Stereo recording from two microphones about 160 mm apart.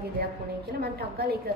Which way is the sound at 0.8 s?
80° right.